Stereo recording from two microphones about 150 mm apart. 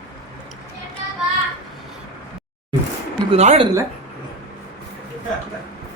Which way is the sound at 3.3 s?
45° right (ahead or behind).